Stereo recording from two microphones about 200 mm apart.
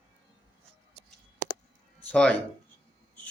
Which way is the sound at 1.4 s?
35° right (ahead or behind).